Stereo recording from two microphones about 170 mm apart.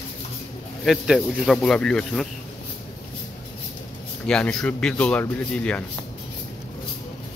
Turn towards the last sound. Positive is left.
turn(degrees=5)  # may be behind; listen again after turning